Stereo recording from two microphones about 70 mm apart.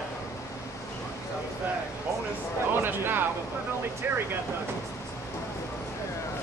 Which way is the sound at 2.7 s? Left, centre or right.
Right.